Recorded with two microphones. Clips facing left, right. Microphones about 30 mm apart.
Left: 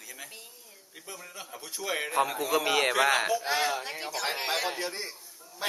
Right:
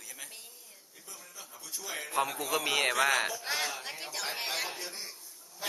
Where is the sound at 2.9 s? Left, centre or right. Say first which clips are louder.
Left 3 dB; left.